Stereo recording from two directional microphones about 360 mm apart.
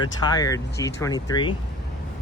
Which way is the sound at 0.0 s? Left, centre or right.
Centre.